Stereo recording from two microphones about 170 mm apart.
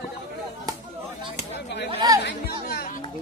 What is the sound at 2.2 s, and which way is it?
Chatter, 90° left.